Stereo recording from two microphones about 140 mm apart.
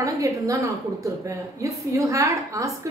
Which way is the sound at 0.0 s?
20° right (ahead or behind).